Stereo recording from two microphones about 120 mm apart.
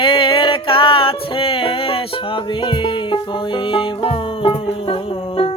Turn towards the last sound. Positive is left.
turn(degrees=50)  # may be behind; listen again after turning